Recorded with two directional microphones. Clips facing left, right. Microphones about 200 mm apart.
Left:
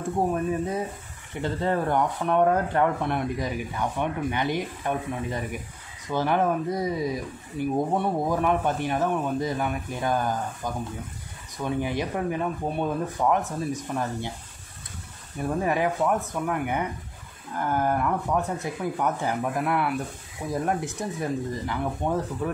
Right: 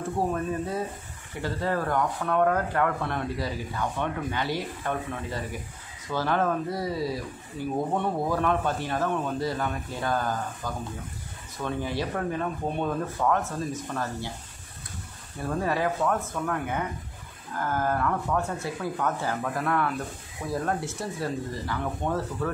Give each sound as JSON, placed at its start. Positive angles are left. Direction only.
{"t": 0.3, "sound": "speech", "side_deg": 15}
{"t": 15.4, "sound": "speech", "side_deg": 15}